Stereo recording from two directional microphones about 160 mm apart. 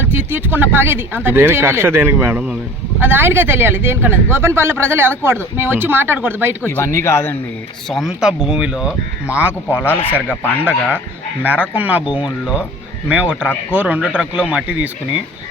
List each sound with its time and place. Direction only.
0.1 s speech: 15° right (ahead or behind)
6.6 s speech: 15° left (ahead or behind)
7.9 s speech: centre (ahead or behind)
11.4 s speech: 10° right (ahead or behind)